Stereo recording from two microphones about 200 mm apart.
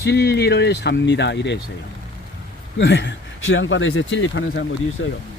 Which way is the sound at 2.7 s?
65° left (ahead or behind).